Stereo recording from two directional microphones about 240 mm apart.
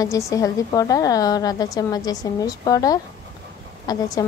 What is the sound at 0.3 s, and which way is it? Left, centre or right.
A woman's voice, centre.